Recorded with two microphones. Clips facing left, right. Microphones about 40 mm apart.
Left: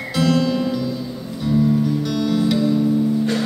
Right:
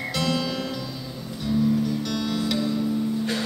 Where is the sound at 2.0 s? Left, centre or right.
Centre.